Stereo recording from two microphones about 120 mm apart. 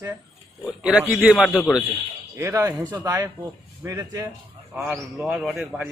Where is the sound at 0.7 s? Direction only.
10° right (ahead or behind).